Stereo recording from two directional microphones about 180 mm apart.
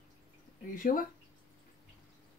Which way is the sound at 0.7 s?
50° left (ahead or behind).